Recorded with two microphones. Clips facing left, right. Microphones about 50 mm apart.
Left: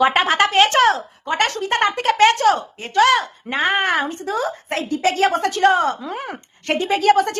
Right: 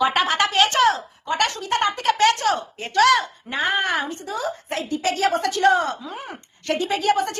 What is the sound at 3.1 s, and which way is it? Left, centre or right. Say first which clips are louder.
Speech: left 1 dB; left.